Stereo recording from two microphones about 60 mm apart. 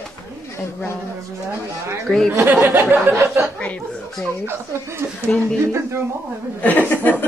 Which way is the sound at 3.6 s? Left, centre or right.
Left.